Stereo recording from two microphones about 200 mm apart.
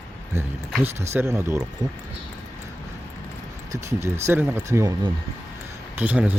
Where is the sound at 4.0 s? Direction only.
10° right (ahead or behind).